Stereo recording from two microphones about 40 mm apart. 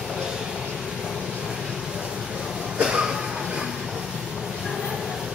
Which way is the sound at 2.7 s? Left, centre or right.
Right.